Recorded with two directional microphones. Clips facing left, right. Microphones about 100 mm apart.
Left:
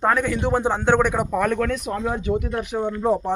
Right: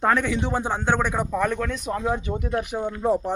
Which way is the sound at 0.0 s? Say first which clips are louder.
Left 1 dB; 5° left (ahead or behind).